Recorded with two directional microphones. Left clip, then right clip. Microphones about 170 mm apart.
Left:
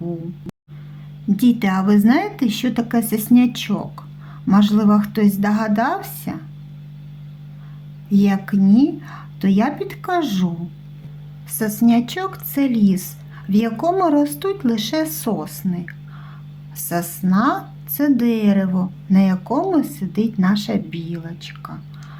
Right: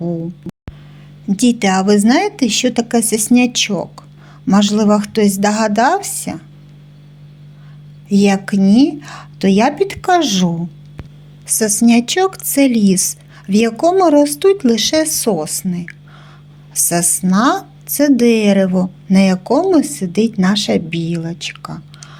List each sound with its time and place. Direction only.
0.5 s music: centre (ahead or behind)
1.3 s a woman's voice: 20° right (ahead or behind)
8.1 s a woman's voice: 20° right (ahead or behind)